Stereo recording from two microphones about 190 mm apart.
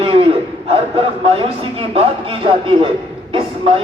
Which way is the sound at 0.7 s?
30° right (ahead or behind).